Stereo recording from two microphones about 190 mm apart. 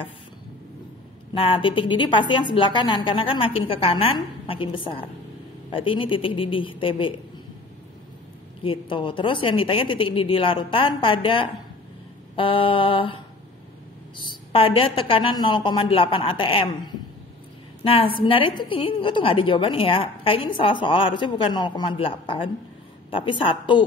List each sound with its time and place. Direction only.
1.3 s a woman's voice: 25° left (ahead or behind)
8.6 s a woman's voice: 25° left (ahead or behind)